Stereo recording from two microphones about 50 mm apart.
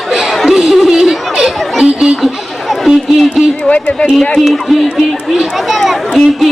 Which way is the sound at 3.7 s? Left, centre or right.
Left.